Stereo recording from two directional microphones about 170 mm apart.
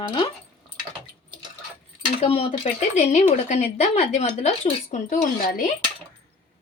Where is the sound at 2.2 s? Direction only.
35° left (ahead or behind).